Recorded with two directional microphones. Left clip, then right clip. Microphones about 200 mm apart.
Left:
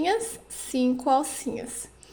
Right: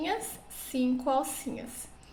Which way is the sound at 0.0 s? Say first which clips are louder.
Left 7 dB; 40° left (ahead or behind).